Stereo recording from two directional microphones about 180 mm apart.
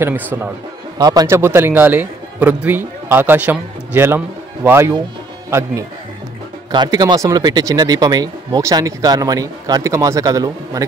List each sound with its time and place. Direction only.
0.0 s a man's voice: 10° right (ahead or behind)
0.9 s a man's voice: 20° right (ahead or behind)